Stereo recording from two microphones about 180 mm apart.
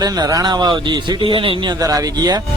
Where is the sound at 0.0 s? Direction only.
20° right (ahead or behind).